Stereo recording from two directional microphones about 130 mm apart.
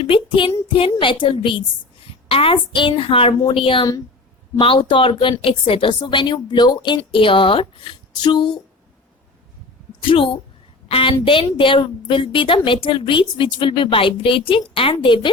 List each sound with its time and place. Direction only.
0.0 s a woman's voice: 40° left (ahead or behind)
10.0 s a woman's voice: 40° left (ahead or behind)